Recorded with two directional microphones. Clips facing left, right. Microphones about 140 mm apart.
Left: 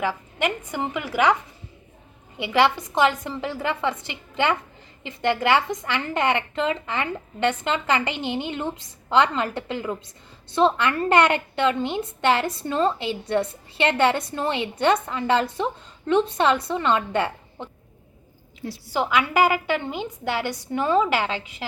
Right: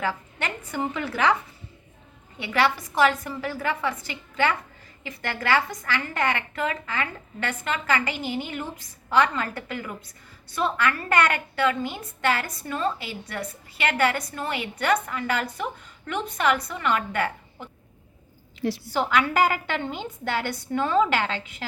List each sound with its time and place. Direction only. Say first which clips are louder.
0.0 s a woman's voice: left 4 dB; 15° left (ahead or behind)
2.4 s a woman's voice: left 4 dB; 20° left (ahead or behind)
18.9 s a woman's voice: left 2 dB; 15° left (ahead or behind)